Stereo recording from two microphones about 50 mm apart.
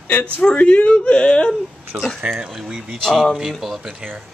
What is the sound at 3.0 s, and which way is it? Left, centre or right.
Speech, centre.